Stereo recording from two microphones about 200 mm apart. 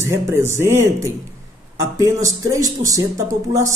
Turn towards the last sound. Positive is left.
turn(degrees=-15)  # may be behind; listen again after turning